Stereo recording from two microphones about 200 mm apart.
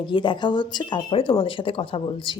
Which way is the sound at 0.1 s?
25° left (ahead or behind).